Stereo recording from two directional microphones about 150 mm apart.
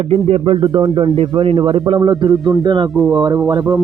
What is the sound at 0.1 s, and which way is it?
A man's voice, 40° right (ahead or behind).